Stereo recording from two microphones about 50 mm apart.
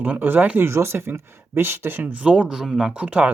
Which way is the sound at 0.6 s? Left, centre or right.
Right.